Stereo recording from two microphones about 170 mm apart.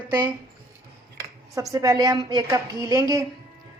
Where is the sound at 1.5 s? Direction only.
20° right (ahead or behind).